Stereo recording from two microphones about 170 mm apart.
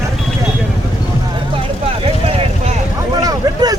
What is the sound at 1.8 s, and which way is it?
Vehicle, 35° right (ahead or behind).